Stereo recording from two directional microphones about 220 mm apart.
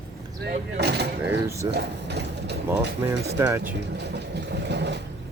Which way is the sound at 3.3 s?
15° right (ahead or behind).